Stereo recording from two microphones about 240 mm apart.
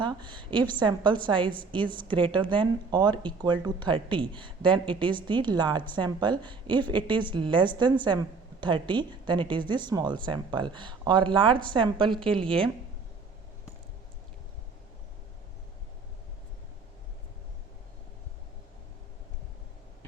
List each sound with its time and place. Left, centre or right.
0.0 s a woman's voice: centre
0.5 s a woman's voice: centre
0.9 s a woman's voice: centre
12.0 s a woman's voice: centre